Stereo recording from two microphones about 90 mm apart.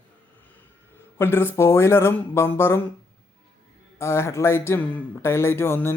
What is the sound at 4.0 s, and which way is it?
Speech, 30° left (ahead or behind).